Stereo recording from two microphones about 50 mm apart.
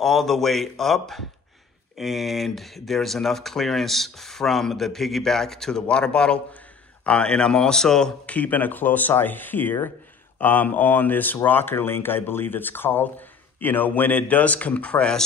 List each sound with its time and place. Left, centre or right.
0.0 s speech: centre
8.3 s speech: left